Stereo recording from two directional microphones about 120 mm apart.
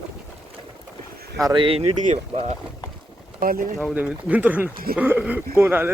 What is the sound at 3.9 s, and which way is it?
Speech, 15° right (ahead or behind).